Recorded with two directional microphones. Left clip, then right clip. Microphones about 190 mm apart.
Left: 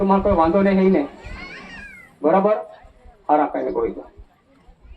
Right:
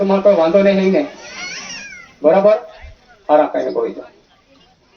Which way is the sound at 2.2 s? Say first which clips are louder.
Right 6 dB; 25° right (ahead or behind).